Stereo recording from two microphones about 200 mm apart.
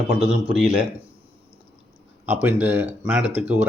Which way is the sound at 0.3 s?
5° right (ahead or behind).